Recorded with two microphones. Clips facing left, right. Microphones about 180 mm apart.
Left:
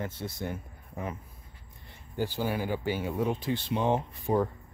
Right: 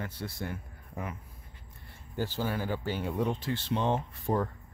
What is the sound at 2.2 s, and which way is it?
Speech, 15° left (ahead or behind).